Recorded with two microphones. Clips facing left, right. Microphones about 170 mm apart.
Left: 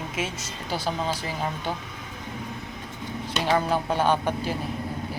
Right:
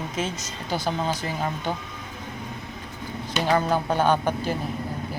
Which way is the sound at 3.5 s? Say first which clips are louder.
Right 1 dB; 5° left (ahead or behind).